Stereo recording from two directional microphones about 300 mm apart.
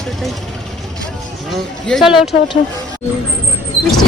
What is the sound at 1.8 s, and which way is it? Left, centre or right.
Speech, centre.